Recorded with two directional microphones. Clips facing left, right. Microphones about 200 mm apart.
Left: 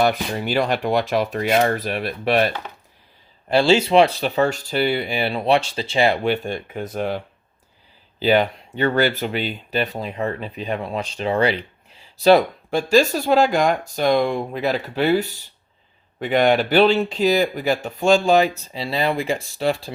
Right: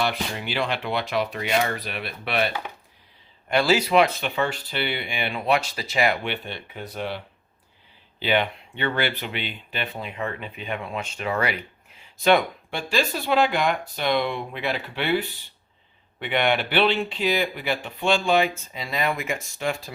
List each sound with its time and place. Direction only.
0.0 s speech: 45° left (ahead or behind)
3.5 s speech: 25° left (ahead or behind)
6.2 s speech: 45° left (ahead or behind)
8.2 s speech: 40° left (ahead or behind)